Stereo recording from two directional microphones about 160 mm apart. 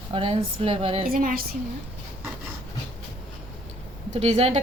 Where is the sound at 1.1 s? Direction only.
60° right (ahead or behind).